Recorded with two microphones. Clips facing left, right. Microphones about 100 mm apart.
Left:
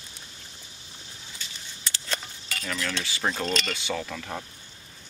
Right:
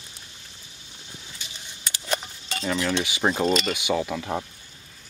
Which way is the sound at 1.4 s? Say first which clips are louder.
Left 1 dB; 15° right (ahead or behind).